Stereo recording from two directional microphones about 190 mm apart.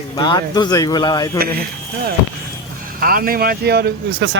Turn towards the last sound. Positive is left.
turn(degrees=-60)  # may be behind; listen again after turning